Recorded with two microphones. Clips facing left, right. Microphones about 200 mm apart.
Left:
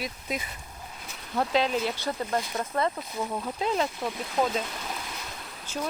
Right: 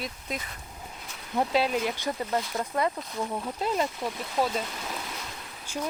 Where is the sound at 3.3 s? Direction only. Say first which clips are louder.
Left 1 dB; 5° right (ahead or behind).